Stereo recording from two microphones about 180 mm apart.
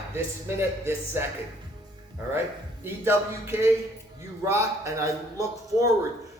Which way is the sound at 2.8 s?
15° right (ahead or behind).